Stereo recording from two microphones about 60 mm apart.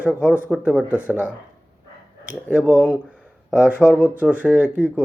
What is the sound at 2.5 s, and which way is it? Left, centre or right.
Speech, centre.